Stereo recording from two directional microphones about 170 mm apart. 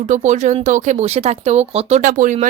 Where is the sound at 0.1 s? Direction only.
45° right (ahead or behind).